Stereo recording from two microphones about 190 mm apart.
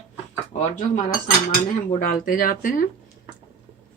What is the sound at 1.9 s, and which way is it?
Speech, 50° left (ahead or behind).